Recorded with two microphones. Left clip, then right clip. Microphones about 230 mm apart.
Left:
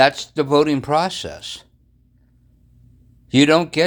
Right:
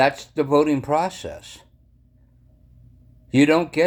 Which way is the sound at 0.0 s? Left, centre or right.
Left.